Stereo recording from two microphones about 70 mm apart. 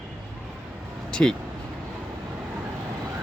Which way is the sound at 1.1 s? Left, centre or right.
Centre.